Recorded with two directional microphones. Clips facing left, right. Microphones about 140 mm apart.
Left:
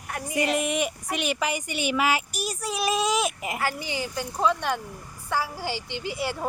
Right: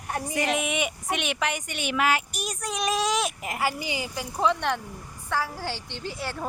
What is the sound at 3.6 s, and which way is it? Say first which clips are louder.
Speech: right 2 dB; 10° right (ahead or behind).